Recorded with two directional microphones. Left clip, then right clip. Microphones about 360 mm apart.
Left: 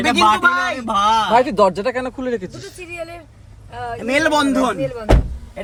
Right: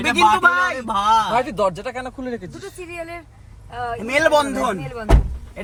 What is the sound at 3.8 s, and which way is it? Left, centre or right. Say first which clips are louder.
Speech: even; centre.